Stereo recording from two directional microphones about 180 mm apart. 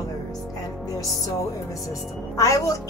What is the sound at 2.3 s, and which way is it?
Music, 15° left (ahead or behind).